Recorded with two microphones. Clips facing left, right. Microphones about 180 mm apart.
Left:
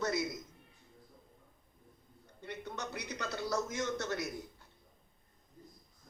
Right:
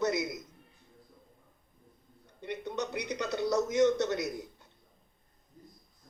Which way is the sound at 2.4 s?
15° right (ahead or behind).